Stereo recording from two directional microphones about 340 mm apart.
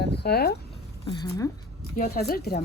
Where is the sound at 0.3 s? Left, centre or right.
Left.